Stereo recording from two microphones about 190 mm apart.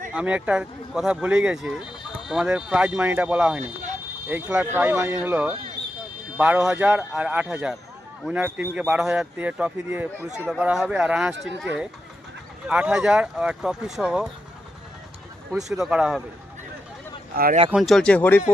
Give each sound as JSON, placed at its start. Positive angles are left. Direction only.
{"t": 0.1, "sound": "a man's voice", "side_deg": -5}
{"t": 12.6, "sound": "a man's voice", "side_deg": -5}
{"t": 15.5, "sound": "a man's voice", "side_deg": 0}
{"t": 17.3, "sound": "speech", "side_deg": -50}
{"t": 17.7, "sound": "a man's voice", "side_deg": 0}